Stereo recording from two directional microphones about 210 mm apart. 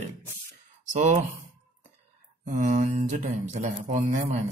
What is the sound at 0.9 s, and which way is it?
Speech, 35° right (ahead or behind).